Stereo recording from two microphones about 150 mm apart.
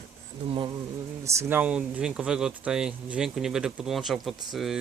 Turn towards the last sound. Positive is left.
turn(degrees=0)  # may be behind; listen again after turning